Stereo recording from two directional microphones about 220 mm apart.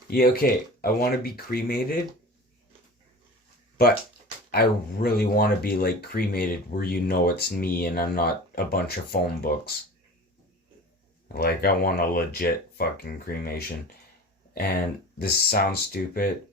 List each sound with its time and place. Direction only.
0.1 s speech: 40° left (ahead or behind)
4.5 s speech: 45° left (ahead or behind)
11.3 s speech: 45° left (ahead or behind)